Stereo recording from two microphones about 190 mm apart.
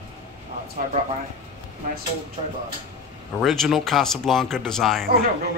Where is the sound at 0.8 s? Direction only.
45° right (ahead or behind).